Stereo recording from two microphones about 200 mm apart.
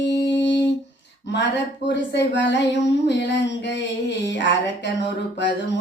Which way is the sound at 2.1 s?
60° left (ahead or behind).